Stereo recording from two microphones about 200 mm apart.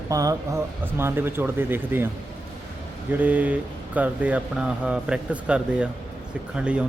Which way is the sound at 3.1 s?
10° right (ahead or behind).